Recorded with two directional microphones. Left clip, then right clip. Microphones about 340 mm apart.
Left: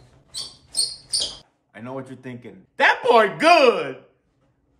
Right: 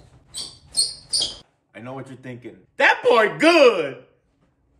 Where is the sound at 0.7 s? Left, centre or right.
Centre.